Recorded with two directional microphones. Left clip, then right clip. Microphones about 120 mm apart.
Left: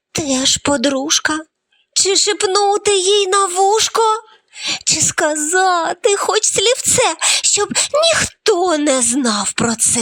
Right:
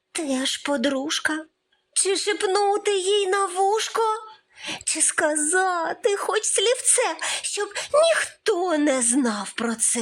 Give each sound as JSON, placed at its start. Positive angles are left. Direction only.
{"t": 0.1, "sound": "a woman's voice", "side_deg": 35}